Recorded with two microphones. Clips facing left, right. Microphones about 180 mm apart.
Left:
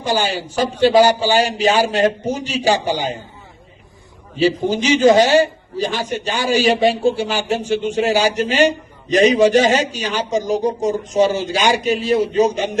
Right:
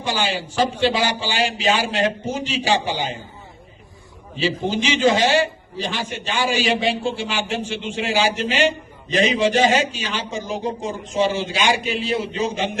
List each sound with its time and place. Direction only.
0.0 s a man's voice: 40° left (ahead or behind)
4.4 s a man's voice: 40° left (ahead or behind)